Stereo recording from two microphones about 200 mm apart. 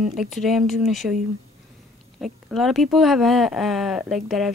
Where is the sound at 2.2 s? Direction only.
Centre (ahead or behind).